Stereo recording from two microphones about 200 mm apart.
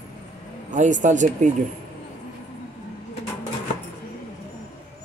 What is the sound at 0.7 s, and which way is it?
Speech, 40° right (ahead or behind).